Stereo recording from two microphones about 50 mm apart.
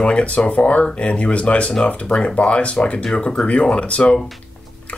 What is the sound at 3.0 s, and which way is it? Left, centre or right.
Speech, centre.